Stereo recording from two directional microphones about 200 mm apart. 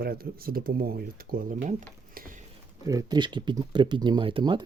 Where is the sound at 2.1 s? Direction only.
45° right (ahead or behind).